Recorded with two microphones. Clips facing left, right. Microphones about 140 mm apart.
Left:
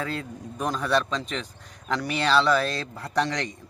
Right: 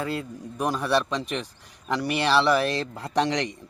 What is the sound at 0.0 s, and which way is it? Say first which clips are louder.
Speech: right 2 dB; 5° right (ahead or behind).